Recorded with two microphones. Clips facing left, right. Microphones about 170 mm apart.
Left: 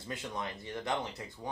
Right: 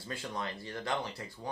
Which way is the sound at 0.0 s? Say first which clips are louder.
Even; 20° left (ahead or behind).